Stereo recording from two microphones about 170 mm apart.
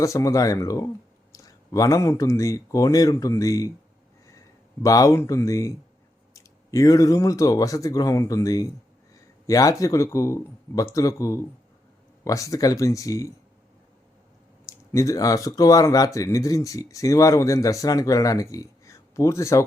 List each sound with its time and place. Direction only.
0.0 s speech: 20° left (ahead or behind)
4.8 s speech: 20° left (ahead or behind)
14.9 s speech: 20° left (ahead or behind)